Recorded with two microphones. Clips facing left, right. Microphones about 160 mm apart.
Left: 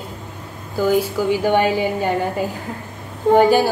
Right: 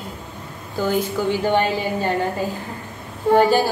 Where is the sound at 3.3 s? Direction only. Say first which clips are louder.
Left 2 dB; 15° left (ahead or behind).